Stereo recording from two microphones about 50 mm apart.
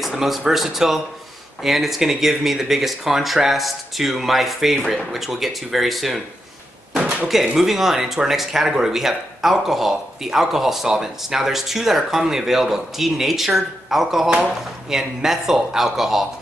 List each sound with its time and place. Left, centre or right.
0.0 s speech: centre
6.9 s a sound: right
7.5 s speech: centre